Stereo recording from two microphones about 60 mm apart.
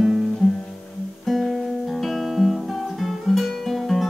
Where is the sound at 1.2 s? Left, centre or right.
Centre.